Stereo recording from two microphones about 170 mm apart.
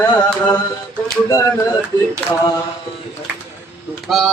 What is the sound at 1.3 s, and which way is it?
Speech, 20° left (ahead or behind).